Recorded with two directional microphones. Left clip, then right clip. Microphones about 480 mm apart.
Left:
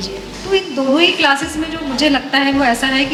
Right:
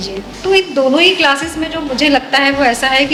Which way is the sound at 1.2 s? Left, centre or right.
Right.